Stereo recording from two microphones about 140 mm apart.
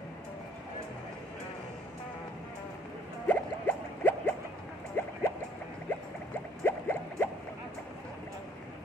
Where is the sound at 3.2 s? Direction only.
15° left (ahead or behind).